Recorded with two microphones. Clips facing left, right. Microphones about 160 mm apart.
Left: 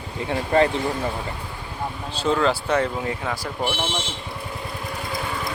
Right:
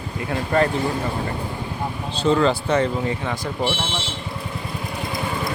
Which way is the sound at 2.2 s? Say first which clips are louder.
Right 3 dB; centre (ahead or behind).